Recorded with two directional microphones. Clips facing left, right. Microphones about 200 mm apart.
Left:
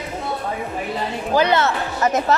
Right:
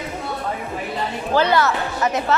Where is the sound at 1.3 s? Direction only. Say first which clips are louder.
Even; 20° left (ahead or behind).